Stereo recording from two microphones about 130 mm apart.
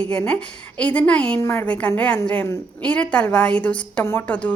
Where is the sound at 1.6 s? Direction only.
10° left (ahead or behind).